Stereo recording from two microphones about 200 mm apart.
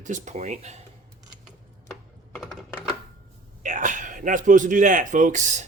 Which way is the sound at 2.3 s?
Centre (ahead or behind).